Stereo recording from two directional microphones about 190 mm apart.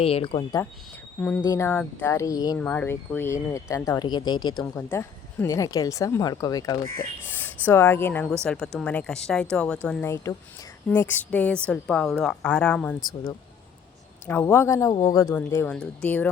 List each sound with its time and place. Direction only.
0.0 s speech: 30° left (ahead or behind)
1.5 s a woman's voice: 15° left (ahead or behind)
14.3 s speech: 10° left (ahead or behind)